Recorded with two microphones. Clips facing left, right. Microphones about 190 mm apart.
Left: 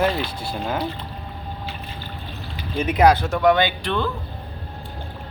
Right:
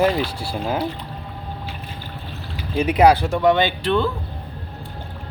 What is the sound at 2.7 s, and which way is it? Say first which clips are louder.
Speech: right 2 dB; 10° right (ahead or behind).